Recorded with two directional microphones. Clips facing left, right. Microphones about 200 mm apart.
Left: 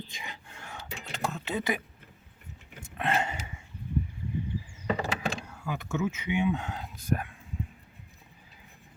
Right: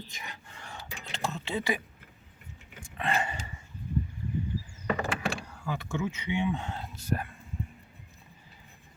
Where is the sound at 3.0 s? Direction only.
5° left (ahead or behind).